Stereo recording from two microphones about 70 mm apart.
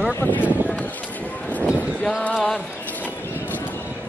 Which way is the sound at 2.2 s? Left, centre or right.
Centre.